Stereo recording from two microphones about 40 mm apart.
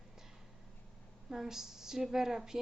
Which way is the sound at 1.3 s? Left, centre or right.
Centre.